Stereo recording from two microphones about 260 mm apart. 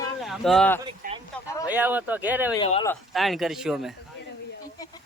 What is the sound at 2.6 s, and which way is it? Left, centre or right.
Speech, left.